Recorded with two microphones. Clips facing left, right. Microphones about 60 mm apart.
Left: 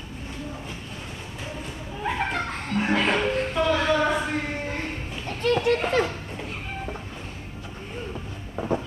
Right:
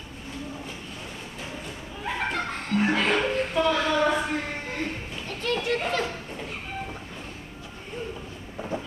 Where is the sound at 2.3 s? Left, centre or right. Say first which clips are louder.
Even; centre.